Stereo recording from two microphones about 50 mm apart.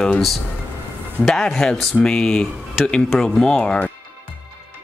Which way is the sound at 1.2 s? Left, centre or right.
Centre.